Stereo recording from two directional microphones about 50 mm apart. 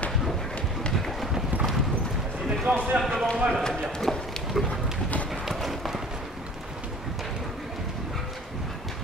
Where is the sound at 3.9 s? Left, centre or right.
Centre.